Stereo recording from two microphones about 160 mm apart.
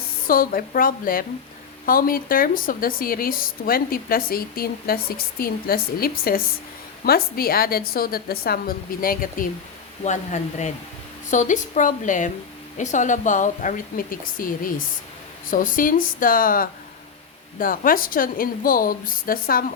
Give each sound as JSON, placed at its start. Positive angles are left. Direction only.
{"t": 0.3, "sound": "a woman's voice", "side_deg": 65}
{"t": 10.0, "sound": "a woman's voice", "side_deg": 45}